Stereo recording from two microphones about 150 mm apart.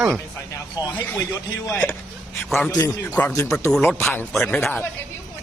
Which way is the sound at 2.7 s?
25° left (ahead or behind).